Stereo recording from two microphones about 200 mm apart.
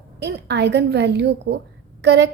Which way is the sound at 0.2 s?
55° right (ahead or behind).